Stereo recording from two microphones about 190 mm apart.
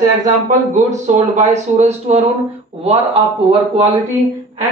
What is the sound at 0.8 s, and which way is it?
A man's voice, 40° right (ahead or behind).